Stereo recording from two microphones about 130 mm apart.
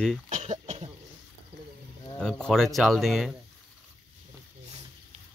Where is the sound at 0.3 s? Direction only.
60° right (ahead or behind).